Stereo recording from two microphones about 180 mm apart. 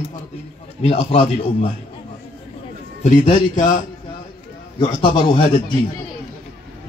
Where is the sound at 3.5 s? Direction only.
45° left (ahead or behind).